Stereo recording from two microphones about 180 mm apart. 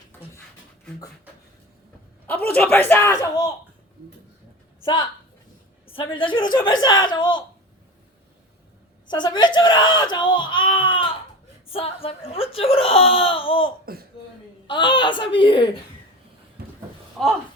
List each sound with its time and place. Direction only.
2.5 s speech: 10° left (ahead or behind)
5.9 s a woman's voice: 30° left (ahead or behind)
9.0 s speech: 25° left (ahead or behind)
13.9 s a sound: 55° right (ahead or behind)
14.7 s a woman's voice: 25° left (ahead or behind)
16.6 s a sound: 60° right (ahead or behind)
17.2 s speech: centre (ahead or behind)